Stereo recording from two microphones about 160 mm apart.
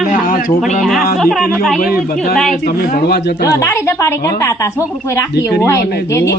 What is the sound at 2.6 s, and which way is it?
Speech, 75° left (ahead or behind).